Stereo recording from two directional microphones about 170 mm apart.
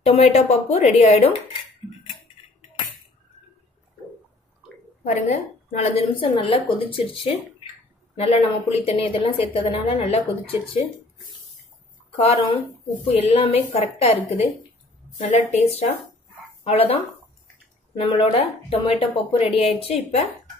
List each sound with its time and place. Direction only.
0.0 s a woman's voice: 40° left (ahead or behind)
5.0 s a woman's voice: 45° left (ahead or behind)
13.0 s a woman's voice: 35° left (ahead or behind)